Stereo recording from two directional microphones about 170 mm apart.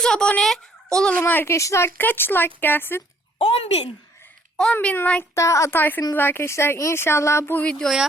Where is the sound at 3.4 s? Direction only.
35° left (ahead or behind).